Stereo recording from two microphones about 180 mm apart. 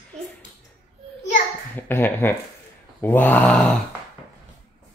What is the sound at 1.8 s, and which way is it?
Speech, 10° left (ahead or behind).